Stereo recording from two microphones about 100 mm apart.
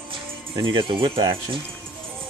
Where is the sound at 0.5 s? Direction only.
50° right (ahead or behind).